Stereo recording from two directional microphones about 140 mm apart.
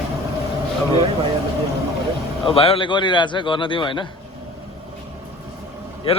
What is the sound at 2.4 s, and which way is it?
A man's voice, 40° left (ahead or behind).